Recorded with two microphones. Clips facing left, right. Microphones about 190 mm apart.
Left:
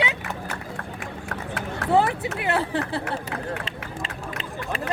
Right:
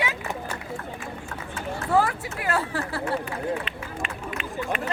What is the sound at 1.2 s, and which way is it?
Run, 60° left (ahead or behind).